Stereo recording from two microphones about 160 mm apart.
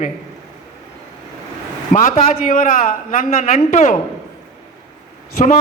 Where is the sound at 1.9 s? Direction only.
55° left (ahead or behind).